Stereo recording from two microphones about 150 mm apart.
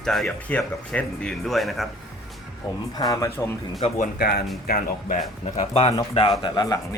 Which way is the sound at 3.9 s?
90° left.